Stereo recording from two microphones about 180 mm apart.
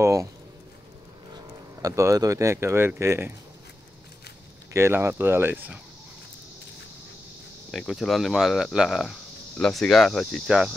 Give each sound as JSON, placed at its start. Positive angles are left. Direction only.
{"t": 0.0, "sound": "speech", "side_deg": -15}
{"t": 1.3, "sound": "speech", "side_deg": -20}
{"t": 4.7, "sound": "speech", "side_deg": -15}
{"t": 7.7, "sound": "speech", "side_deg": 0}